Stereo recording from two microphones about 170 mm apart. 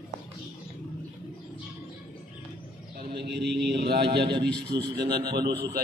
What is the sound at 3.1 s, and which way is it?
Mantra, 75° right (ahead or behind).